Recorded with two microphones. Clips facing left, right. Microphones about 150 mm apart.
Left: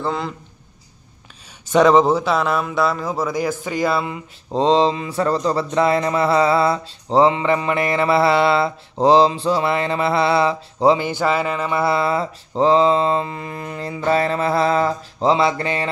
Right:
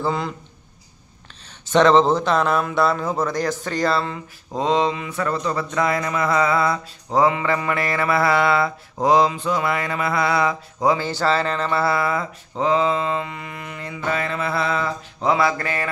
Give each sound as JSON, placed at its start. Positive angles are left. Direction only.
{"t": 0.0, "sound": "a man's voice", "side_deg": 0}
{"t": 1.7, "sound": "speech", "side_deg": 10}
{"t": 4.5, "sound": "a sound", "side_deg": 30}
{"t": 11.0, "sound": "mantra", "side_deg": 15}